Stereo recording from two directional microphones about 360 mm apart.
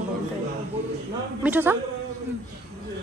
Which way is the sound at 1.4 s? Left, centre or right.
Centre.